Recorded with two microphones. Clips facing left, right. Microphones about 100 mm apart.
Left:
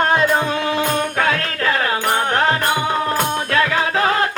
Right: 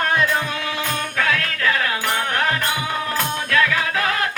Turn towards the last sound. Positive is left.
turn(degrees=30)  # may be behind; listen again after turning